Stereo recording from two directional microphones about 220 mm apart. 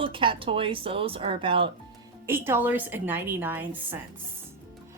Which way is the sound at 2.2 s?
10° right (ahead or behind).